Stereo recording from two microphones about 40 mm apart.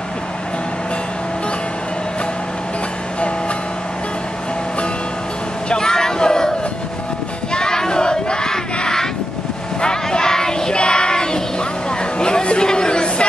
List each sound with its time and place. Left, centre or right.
5.7 s a sound: centre
7.5 s child singing: centre
12.2 s chatter: left